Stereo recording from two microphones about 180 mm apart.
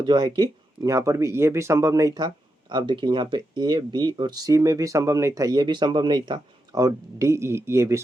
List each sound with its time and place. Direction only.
0.0 s speech: 25° right (ahead or behind)